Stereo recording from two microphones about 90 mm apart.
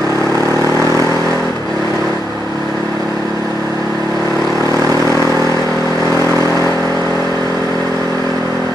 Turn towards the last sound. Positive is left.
turn(degrees=35)  # may be behind; listen again after turning